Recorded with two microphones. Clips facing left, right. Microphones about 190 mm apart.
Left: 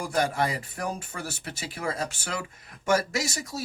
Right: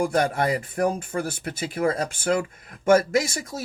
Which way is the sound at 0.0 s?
55° right (ahead or behind).